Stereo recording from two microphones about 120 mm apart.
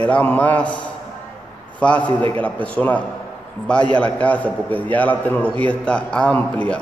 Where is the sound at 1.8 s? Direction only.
10° left (ahead or behind).